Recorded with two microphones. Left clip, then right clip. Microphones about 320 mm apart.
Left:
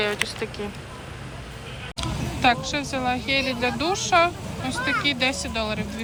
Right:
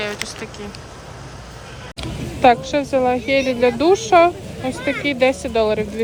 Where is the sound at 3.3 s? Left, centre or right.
Centre.